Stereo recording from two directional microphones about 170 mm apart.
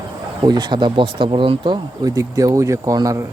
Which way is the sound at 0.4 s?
25° right (ahead or behind).